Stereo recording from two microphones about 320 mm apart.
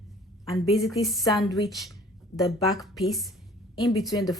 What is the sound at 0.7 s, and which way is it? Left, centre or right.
Speech, centre.